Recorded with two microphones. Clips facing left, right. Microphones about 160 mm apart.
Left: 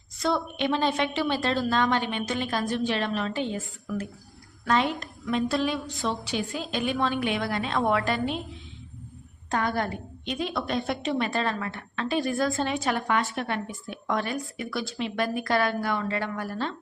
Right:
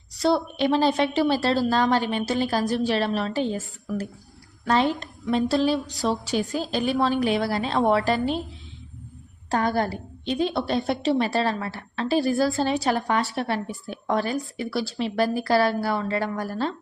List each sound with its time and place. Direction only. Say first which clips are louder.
0.2 s a woman's voice: right 5 dB; 35° right (ahead or behind)
9.5 s a woman's voice: right 4 dB; 35° right (ahead or behind)